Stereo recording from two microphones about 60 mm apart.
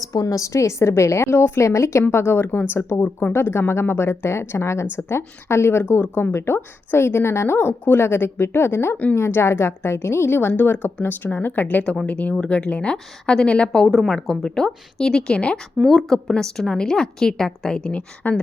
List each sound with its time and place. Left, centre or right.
0.0 s a woman's voice: left
2.0 s speech: left
3.0 s speech: left
3.3 s a woman's voice: left
12.0 s a woman's voice: left
13.8 s a woman's voice: centre
18.2 s speech: left